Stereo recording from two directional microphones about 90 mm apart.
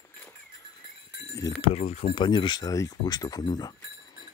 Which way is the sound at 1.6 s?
85° left.